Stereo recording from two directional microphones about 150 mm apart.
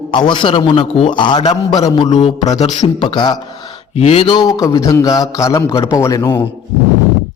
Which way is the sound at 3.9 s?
40° left (ahead or behind).